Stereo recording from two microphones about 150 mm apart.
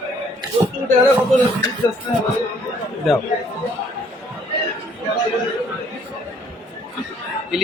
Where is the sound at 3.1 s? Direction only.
Centre (ahead or behind).